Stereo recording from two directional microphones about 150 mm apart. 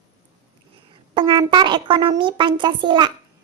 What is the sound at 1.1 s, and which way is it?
A child's voice, 35° right (ahead or behind).